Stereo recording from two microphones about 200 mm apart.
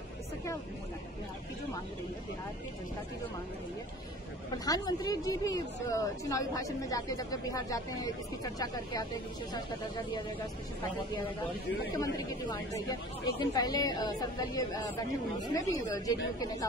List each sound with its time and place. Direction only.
4.6 s a woman's voice: 20° left (ahead or behind)
12.0 s a woman's voice: 15° left (ahead or behind)